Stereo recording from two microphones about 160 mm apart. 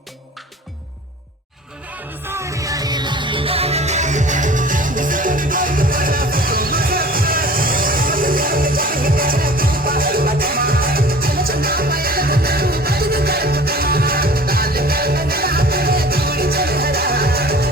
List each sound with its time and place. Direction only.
2.2 s music: 15° right (ahead or behind); by 17.7 s 75° right (ahead or behind)